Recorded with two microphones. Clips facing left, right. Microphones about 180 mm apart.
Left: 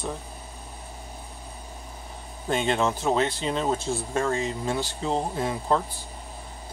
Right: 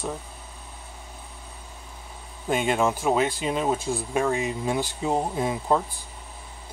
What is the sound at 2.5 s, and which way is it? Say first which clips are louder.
Speech: right 1 dB; 10° right (ahead or behind).